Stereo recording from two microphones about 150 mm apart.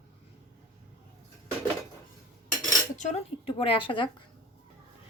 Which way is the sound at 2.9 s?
55° left (ahead or behind).